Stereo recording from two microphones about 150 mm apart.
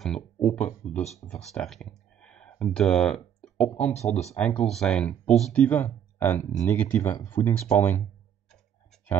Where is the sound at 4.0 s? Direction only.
45° left (ahead or behind).